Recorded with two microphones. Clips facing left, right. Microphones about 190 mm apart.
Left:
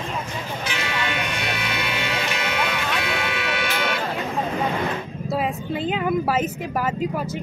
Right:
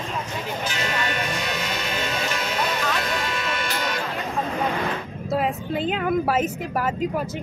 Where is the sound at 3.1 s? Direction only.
70° left (ahead or behind).